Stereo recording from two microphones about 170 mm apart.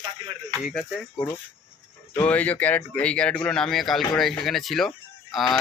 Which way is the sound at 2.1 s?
10° left (ahead or behind).